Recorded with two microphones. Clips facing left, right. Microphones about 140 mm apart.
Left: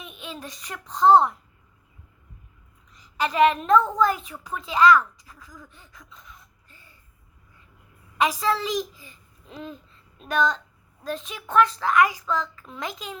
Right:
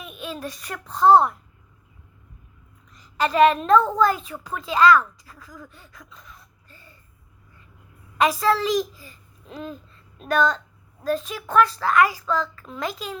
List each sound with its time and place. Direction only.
0.0 s a child's voice: 20° left (ahead or behind)
2.9 s a woman's voice: 15° left (ahead or behind)
8.2 s a child's voice: 15° left (ahead or behind)
9.5 s a sound: 40° right (ahead or behind)
10.2 s a child's voice: 15° left (ahead or behind)